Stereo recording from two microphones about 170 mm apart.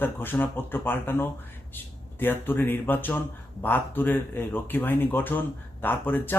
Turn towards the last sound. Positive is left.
turn(degrees=10)  # may be behind; listen again after turning